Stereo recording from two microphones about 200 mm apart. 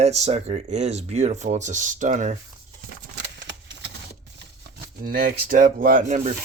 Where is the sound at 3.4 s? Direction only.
60° right (ahead or behind).